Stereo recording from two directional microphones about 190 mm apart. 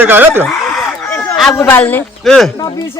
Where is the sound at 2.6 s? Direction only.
20° left (ahead or behind).